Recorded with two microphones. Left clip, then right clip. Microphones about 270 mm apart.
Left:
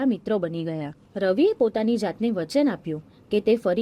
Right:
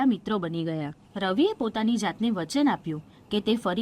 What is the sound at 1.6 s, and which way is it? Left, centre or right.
Speech, right.